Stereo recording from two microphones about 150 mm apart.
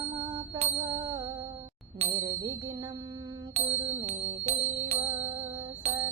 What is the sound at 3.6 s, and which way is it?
Music, 45° right (ahead or behind).